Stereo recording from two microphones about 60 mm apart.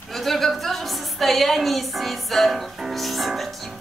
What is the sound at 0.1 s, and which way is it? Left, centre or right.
A woman's voice, centre.